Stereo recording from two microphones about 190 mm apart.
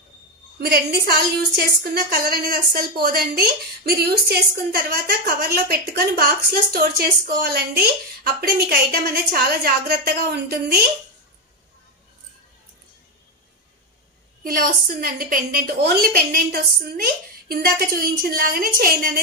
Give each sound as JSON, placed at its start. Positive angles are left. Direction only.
{"t": 0.6, "sound": "a woman's voice", "side_deg": -55}
{"t": 14.4, "sound": "a woman's voice", "side_deg": -50}